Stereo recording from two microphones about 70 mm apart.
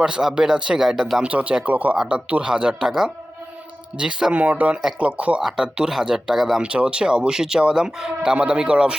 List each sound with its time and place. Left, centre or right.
0.0 s speech: centre
5.4 s speech: centre
6.6 s speech: centre